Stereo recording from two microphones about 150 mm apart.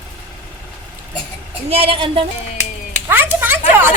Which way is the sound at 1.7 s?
40° right (ahead or behind).